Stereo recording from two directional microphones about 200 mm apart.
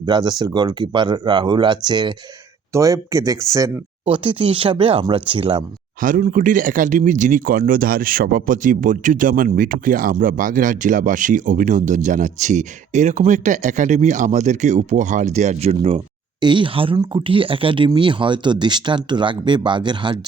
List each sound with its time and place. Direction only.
0.0 s speech: 20° right (ahead or behind)
6.0 s speech: 40° right (ahead or behind); by 20.1 s 25° right (ahead or behind)